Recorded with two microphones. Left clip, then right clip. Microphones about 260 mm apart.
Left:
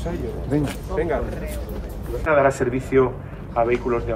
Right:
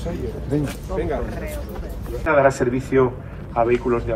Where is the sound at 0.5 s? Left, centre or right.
Centre.